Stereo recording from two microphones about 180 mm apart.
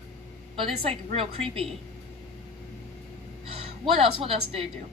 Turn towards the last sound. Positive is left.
turn(degrees=-30)  # may be behind; listen again after turning